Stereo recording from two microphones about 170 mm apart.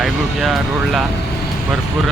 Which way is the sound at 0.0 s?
Centre (ahead or behind).